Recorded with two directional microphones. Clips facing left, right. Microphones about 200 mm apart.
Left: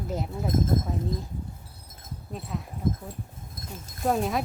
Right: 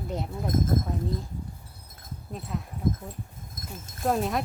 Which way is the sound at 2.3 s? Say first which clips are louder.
Even; centre (ahead or behind).